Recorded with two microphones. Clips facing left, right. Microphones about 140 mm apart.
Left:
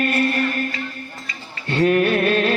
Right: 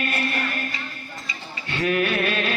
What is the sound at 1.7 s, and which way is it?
Music, 40° left (ahead or behind).